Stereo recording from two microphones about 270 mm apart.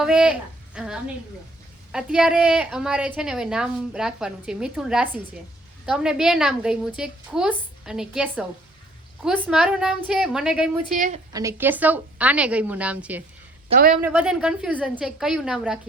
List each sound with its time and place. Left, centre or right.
0.0 s a woman's voice: centre
10.9 s a woman's voice: right
11.3 s a woman's voice: centre
13.7 s a woman's voice: right
14.0 s a woman's voice: centre